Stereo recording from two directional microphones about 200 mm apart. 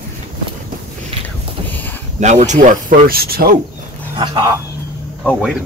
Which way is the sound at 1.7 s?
10° left (ahead or behind).